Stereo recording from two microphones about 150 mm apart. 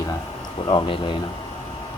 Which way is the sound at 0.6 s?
35° left (ahead or behind).